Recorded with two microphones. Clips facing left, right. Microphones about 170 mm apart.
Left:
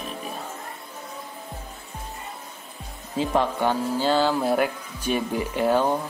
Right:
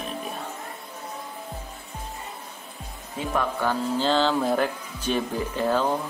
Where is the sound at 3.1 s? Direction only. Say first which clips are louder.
Left 4 dB; 25° left (ahead or behind).